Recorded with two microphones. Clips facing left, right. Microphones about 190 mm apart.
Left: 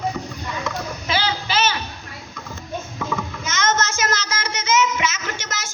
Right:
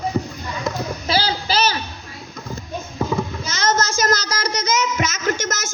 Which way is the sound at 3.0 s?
35° right (ahead or behind).